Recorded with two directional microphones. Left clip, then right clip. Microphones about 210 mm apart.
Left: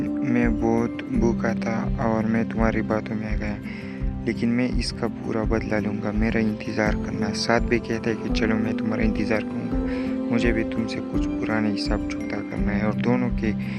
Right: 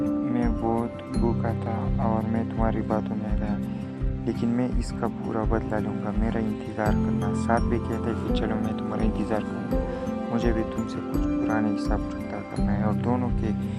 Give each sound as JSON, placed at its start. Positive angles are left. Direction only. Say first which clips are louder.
{"t": 0.3, "sound": "speech", "louder": "left 4 dB", "side_deg": 40}
{"t": 2.0, "sound": "speech", "louder": "left 4 dB", "side_deg": 40}
{"t": 5.0, "sound": "speech", "louder": "left 1 dB", "side_deg": 35}
{"t": 6.7, "sound": "speech", "louder": "left 2 dB", "side_deg": 50}
{"t": 8.0, "sound": "speech", "louder": "left 3 dB", "side_deg": 30}
{"t": 12.6, "sound": "speech", "louder": "left 3 dB", "side_deg": 35}